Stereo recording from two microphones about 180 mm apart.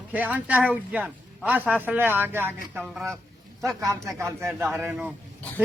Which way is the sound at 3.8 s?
15° right (ahead or behind).